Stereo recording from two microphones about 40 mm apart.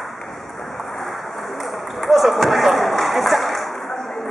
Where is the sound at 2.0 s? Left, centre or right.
Centre.